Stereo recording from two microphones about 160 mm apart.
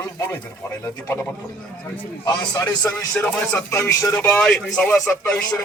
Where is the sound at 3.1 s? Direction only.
5° left (ahead or behind).